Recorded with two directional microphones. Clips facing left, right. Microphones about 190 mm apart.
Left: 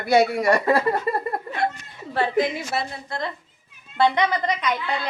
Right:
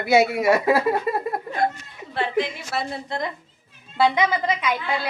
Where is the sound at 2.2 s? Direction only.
40° left (ahead or behind).